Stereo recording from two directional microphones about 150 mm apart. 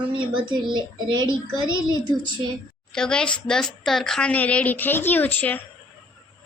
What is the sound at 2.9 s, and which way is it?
A woman's voice, 5° left (ahead or behind).